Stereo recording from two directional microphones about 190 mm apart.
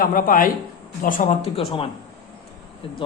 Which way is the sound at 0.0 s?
45° left (ahead or behind).